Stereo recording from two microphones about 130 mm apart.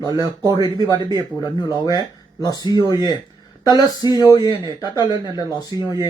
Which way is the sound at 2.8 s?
30° left (ahead or behind).